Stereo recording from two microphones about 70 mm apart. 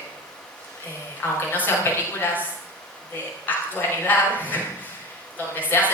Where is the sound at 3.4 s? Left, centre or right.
Left.